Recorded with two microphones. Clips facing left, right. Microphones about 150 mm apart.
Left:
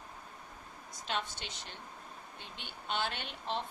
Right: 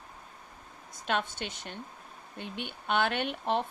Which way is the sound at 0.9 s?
55° right (ahead or behind).